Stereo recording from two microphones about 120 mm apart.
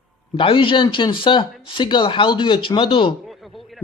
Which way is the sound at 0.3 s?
45° left (ahead or behind).